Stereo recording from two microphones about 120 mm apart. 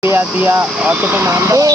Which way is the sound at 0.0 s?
15° right (ahead or behind).